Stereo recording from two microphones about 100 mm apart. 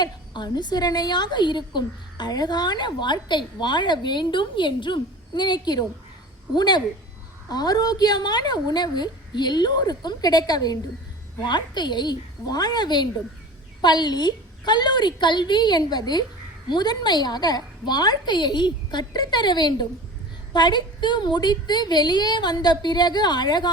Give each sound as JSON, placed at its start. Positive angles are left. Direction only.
{"t": 0.0, "sound": "a woman's voice", "side_deg": 45}